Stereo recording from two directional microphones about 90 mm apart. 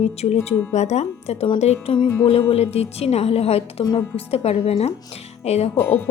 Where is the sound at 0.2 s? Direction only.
90° left.